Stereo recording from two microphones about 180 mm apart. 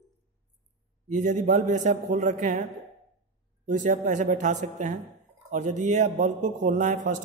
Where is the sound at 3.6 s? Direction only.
45° right (ahead or behind).